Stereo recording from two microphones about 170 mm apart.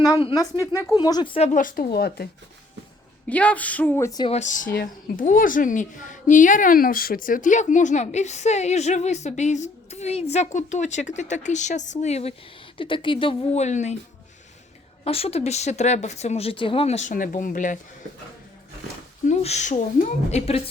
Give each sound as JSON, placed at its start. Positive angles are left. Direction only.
{"t": 0.0, "sound": "speech", "side_deg": 25}
{"t": 1.4, "sound": "speech", "side_deg": 50}
{"t": 3.2, "sound": "speech", "side_deg": 10}
{"t": 4.2, "sound": "a woman's voice", "side_deg": 40}
{"t": 15.0, "sound": "speech", "side_deg": 35}
{"t": 19.3, "sound": "speech", "side_deg": 40}